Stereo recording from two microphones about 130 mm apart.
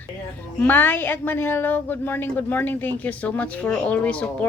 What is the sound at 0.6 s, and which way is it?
A woman's voice, 15° left (ahead or behind).